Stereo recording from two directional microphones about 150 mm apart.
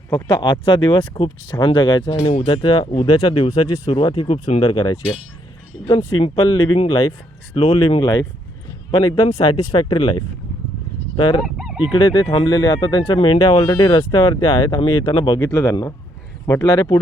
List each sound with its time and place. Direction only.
0.1 s speech: 30° left (ahead or behind); by 4.6 s 45° left (ahead or behind)
4.6 s speech: 30° left (ahead or behind)
6.1 s speech: 35° left (ahead or behind)
7.5 s speech: 40° left (ahead or behind)
11.4 s fowl: centre (ahead or behind)
11.8 s speech: 30° left (ahead or behind)